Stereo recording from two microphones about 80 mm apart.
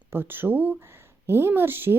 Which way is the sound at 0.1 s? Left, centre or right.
Right.